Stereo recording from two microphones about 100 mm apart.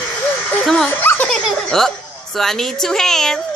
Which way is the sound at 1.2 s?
5° left (ahead or behind).